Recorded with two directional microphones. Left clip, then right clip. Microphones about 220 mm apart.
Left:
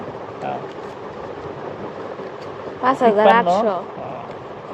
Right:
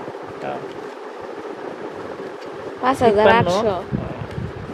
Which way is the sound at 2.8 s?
25° right (ahead or behind).